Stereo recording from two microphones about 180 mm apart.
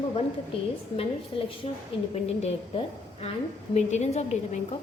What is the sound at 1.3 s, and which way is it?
Speech, 30° left (ahead or behind).